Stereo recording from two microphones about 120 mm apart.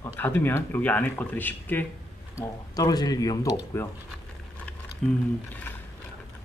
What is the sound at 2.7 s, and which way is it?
Speech, 30° left (ahead or behind).